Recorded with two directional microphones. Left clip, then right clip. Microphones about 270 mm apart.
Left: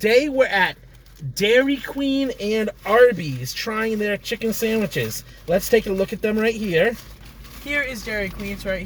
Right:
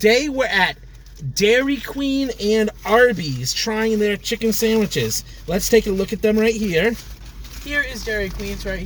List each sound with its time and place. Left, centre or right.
0.0 s speech: centre
7.8 s speech: centre